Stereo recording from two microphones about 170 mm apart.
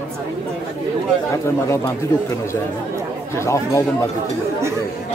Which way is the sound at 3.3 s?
15° left (ahead or behind).